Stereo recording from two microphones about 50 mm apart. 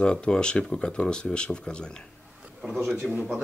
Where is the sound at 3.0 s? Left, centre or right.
Centre.